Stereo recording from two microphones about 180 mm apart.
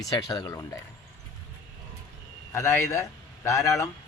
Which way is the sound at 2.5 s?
15° left (ahead or behind).